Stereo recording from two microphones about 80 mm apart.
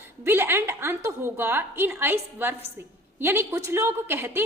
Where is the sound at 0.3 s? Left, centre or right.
Right.